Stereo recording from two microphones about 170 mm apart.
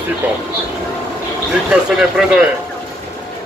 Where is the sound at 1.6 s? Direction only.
5° right (ahead or behind).